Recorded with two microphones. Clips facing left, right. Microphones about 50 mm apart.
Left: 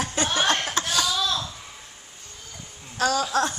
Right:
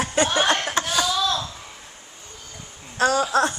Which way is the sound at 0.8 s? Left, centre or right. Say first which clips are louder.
Right 3 dB; centre.